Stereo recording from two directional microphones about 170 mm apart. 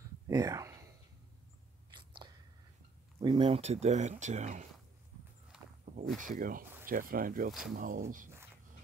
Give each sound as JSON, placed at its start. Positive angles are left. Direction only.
{"t": 0.3, "sound": "a sound", "side_deg": -20}
{"t": 1.9, "sound": "biting", "side_deg": -30}
{"t": 3.2, "sound": "speech", "side_deg": -30}
{"t": 5.5, "sound": "walk", "side_deg": -5}
{"t": 6.1, "sound": "speech", "side_deg": -50}